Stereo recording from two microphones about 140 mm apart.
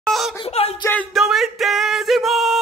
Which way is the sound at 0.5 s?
50° left (ahead or behind).